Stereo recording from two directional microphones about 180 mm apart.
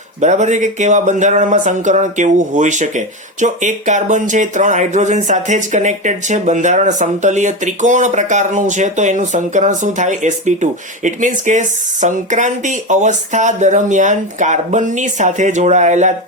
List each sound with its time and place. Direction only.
0.2 s speech: 40° right (ahead or behind)